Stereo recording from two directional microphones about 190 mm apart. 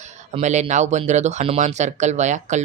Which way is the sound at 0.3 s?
40° right (ahead or behind).